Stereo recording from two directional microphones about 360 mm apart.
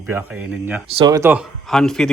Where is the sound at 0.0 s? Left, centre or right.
Centre.